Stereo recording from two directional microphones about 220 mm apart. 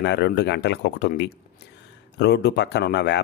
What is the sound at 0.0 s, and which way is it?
Speech, 50° left (ahead or behind).